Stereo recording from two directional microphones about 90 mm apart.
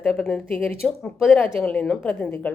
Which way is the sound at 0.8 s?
5° left (ahead or behind).